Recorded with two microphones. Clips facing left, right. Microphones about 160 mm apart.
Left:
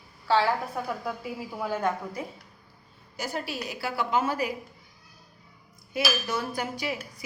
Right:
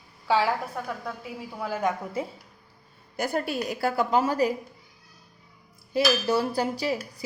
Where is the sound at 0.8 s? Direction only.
5° left (ahead or behind).